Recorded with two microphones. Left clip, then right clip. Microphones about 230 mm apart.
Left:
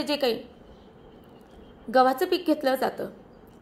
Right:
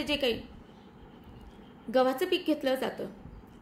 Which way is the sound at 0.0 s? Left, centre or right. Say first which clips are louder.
Left 4 dB; centre.